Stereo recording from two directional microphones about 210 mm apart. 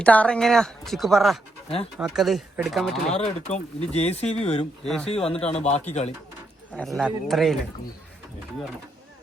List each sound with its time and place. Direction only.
0.0 s speech: 5° left (ahead or behind)
3.1 s speech: 30° left (ahead or behind)
6.7 s speech: centre (ahead or behind)